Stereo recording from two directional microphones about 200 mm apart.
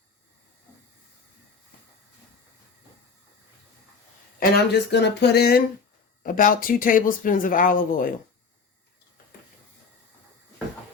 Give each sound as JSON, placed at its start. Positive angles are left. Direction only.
{"t": 4.4, "sound": "speech", "side_deg": 55}